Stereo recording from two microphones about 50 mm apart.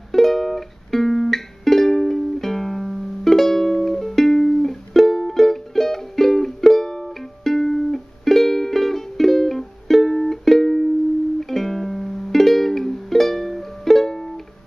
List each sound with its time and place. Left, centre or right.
0.1 s music: centre